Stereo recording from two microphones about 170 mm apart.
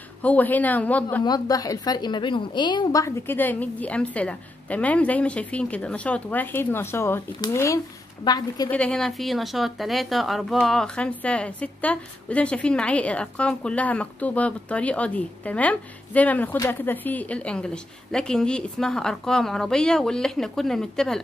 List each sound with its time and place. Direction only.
0.2 s a woman's voice: 10° left (ahead or behind)
1.2 s a woman's voice: 20° left (ahead or behind)
8.6 s speech: 5° left (ahead or behind)